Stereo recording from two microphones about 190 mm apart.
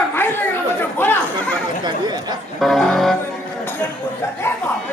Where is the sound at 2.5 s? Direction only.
Centre (ahead or behind).